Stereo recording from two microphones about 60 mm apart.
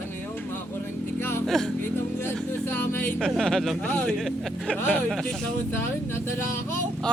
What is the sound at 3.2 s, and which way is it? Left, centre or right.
Speech, centre.